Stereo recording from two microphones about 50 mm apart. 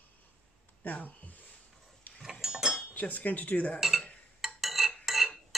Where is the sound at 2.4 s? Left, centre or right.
Centre.